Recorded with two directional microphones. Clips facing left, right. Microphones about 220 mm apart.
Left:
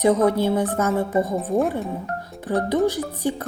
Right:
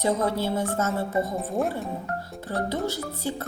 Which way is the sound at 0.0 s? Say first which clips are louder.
Left 7 dB; 15° left (ahead or behind).